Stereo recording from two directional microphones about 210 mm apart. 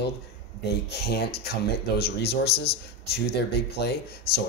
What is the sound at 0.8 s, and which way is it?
Speech, 50° left (ahead or behind).